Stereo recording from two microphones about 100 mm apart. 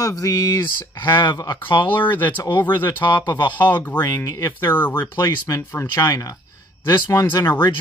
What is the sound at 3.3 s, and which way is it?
Speech, 50° left (ahead or behind).